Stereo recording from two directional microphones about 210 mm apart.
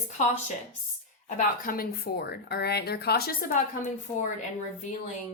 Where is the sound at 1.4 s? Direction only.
45° left (ahead or behind).